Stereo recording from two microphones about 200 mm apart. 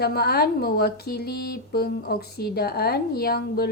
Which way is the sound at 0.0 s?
50° left (ahead or behind).